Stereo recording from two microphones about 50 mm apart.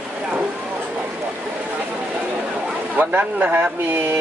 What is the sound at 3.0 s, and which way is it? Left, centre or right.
Speech, right.